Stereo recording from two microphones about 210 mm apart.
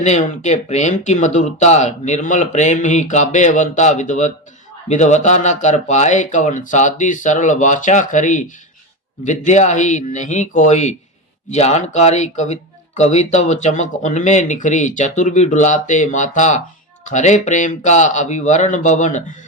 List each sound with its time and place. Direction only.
0.0 s speech: 35° left (ahead or behind)